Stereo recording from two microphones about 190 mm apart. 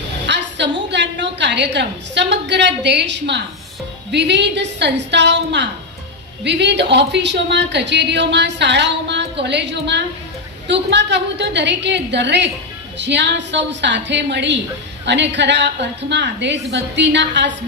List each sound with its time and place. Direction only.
0.3 s a woman's voice: 65° right (ahead or behind)